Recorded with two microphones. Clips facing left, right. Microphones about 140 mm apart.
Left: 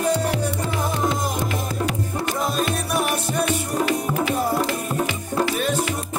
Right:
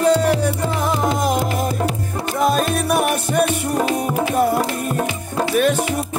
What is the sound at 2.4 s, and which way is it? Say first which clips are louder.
Music: right 9 dB; 60° right (ahead or behind).